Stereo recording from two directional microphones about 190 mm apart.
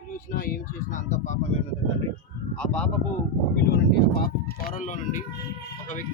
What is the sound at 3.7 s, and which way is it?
Speech, 55° left (ahead or behind).